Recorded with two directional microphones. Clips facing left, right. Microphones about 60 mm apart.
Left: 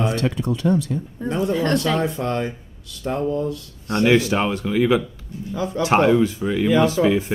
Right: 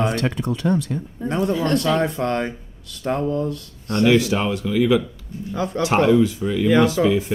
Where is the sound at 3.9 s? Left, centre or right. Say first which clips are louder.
Even; left.